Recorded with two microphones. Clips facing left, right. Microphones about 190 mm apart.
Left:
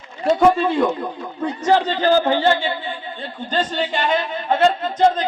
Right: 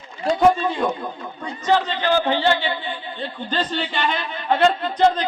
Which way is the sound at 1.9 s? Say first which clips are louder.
Left 4 dB; 40° left (ahead or behind).